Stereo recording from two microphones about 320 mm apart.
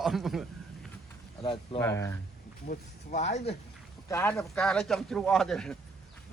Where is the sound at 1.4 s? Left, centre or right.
Centre.